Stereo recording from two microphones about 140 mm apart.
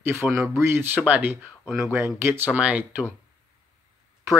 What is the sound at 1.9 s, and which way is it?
Speech, 20° right (ahead or behind).